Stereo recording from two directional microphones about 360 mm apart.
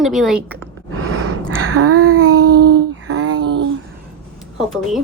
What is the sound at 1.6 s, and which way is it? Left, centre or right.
Child singing, right.